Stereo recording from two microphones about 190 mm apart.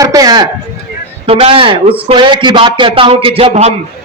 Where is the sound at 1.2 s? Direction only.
30° right (ahead or behind).